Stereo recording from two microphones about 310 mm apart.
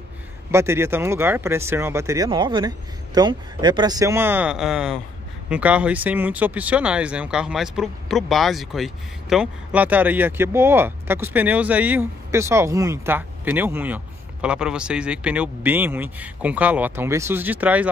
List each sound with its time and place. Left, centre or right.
0.5 s speech: centre